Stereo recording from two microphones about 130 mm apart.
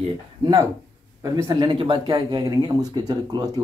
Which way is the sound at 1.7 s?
40° right (ahead or behind).